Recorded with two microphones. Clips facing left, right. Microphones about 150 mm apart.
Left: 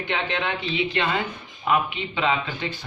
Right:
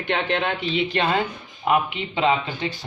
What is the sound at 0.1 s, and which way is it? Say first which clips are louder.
Speech: right 4 dB; 50° right (ahead or behind).